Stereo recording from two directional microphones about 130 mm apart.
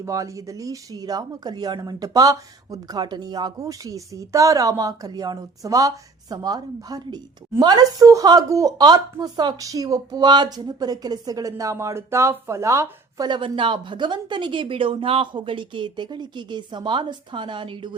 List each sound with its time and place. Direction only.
0.0 s speech: 25° right (ahead or behind)
13.2 s speech: 35° right (ahead or behind)